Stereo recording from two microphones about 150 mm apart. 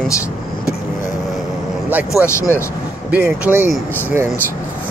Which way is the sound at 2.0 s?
20° left (ahead or behind).